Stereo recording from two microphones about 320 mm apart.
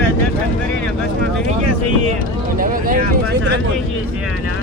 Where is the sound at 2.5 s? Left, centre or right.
Right.